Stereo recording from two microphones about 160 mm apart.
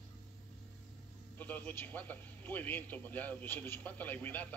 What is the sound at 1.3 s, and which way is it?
A man's voice, 10° left (ahead or behind).